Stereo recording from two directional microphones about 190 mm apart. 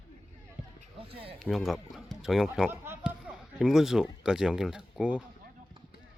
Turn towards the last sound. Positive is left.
turn(degrees=-5)  # may be behind; listen again after turning